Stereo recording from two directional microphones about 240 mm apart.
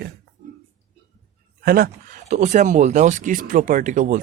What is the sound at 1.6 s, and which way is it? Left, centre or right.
Speech, right.